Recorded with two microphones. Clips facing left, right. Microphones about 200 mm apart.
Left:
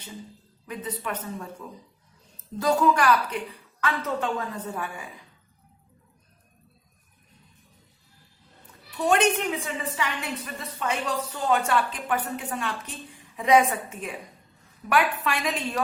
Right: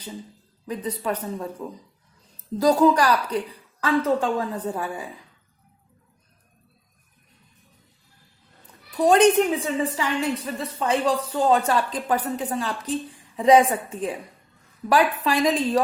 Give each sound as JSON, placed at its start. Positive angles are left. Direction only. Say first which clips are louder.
{"t": 0.7, "sound": "speech", "louder": "right 5 dB", "side_deg": -35}
{"t": 9.0, "sound": "speech", "louder": "right 6 dB", "side_deg": -35}